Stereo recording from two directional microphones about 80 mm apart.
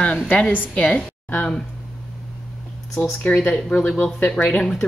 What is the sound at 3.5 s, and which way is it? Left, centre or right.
Speech, centre.